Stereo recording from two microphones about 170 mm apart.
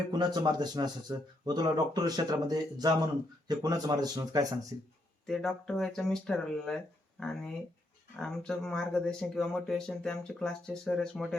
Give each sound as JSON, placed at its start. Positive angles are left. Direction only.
{"t": 0.1, "sound": "speech", "side_deg": -25}
{"t": 5.2, "sound": "speech", "side_deg": 0}